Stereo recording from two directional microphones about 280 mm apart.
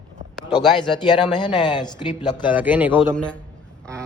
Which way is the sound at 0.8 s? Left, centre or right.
Centre.